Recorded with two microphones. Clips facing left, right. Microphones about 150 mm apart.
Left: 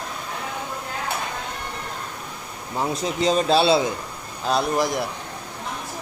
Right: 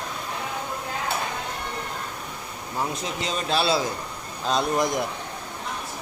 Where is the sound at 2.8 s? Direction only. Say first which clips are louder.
Left 5 dB; 35° left (ahead or behind).